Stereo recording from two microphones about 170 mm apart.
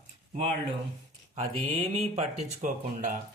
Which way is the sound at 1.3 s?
35° right (ahead or behind).